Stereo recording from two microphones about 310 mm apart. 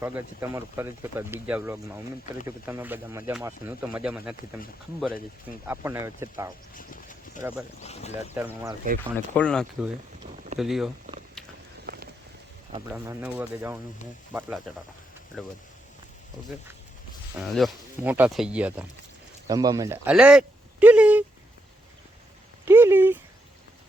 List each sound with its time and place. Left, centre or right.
0.0 s speech: centre
6.7 s a sound: left
7.8 s speech: left
8.4 s speech: centre
9.0 s speech: centre
12.9 s speech: centre
17.3 s speech: centre
22.6 s speech: centre